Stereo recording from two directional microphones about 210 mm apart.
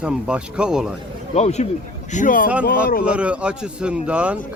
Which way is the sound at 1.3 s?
30° left (ahead or behind).